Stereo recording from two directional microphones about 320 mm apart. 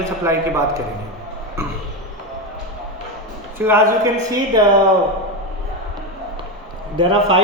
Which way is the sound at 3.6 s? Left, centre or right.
Centre.